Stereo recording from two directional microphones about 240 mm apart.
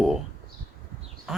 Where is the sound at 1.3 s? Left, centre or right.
Centre.